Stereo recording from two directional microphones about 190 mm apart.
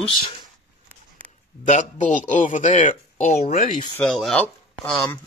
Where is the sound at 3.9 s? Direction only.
5° left (ahead or behind).